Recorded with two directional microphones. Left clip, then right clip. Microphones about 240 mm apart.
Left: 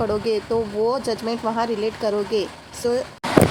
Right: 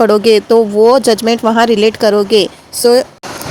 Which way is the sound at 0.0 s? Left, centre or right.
Right.